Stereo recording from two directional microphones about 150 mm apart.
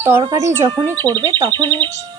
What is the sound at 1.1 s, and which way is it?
Speech, 30° right (ahead or behind).